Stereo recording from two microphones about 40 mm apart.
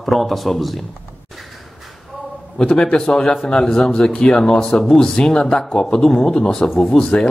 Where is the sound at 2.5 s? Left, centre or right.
Left.